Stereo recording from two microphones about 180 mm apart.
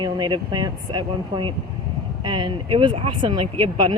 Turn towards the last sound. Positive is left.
turn(degrees=-25)  # may be behind; listen again after turning